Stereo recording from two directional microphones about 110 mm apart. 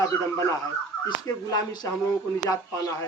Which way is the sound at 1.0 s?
35° left (ahead or behind).